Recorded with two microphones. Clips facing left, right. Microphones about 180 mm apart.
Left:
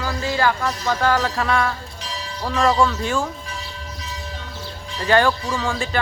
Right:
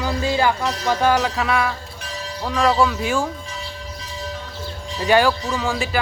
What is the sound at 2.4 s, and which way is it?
Speech, centre (ahead or behind).